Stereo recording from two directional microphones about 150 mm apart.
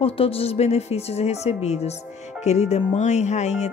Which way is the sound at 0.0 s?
40° left (ahead or behind).